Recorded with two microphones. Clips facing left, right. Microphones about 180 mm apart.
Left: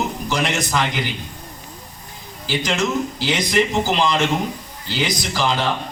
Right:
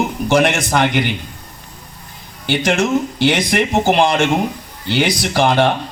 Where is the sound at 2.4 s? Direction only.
65° right (ahead or behind).